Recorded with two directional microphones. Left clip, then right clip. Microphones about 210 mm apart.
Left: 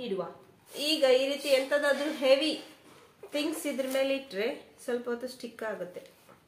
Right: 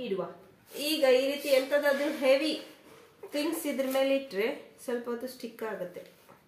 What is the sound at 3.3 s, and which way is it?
Speech, 30° right (ahead or behind).